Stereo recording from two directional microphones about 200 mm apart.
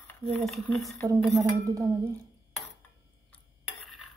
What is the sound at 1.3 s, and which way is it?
Speech, 15° right (ahead or behind).